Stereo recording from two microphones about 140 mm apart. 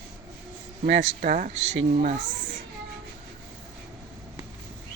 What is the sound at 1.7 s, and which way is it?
Speech, 65° right (ahead or behind).